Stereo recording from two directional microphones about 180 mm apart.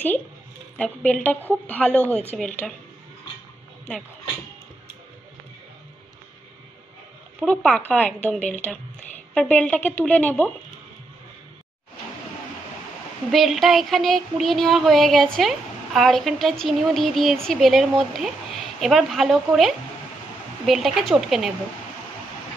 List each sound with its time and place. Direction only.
0.7 s a woman's voice: 10° left (ahead or behind)
2.6 s a sound: centre (ahead or behind)
7.4 s a woman's voice: 10° left (ahead or behind)
8.4 s speech: 40° left (ahead or behind)
9.3 s a woman's voice: 5° left (ahead or behind)
13.3 s a sound: centre (ahead or behind)